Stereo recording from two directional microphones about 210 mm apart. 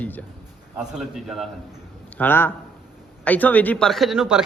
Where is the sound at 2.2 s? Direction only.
10° left (ahead or behind).